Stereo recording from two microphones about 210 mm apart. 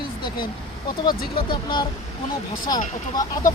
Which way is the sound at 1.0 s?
20° left (ahead or behind).